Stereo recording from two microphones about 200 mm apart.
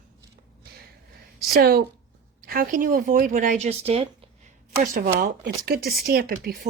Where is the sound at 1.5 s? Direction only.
50° right (ahead or behind); by 4.1 s 30° right (ahead or behind).